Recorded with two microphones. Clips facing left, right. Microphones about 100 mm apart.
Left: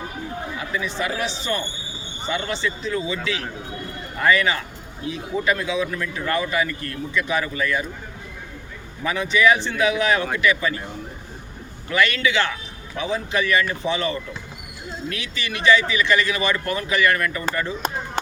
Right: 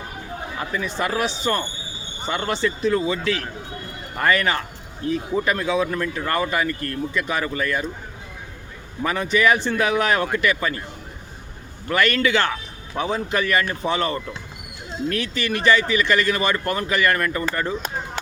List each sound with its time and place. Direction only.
0.9 s speech: 50° right (ahead or behind)
9.0 s speech: 45° right (ahead or behind)
11.9 s speech: 45° right (ahead or behind)